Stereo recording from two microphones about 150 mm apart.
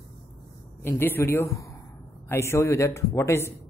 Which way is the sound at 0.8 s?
15° left (ahead or behind).